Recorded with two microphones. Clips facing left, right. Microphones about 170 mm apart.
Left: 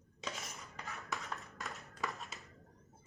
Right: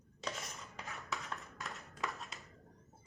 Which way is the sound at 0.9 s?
Centre (ahead or behind).